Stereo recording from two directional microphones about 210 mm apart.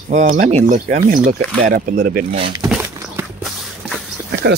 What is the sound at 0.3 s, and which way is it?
Speech, 30° right (ahead or behind).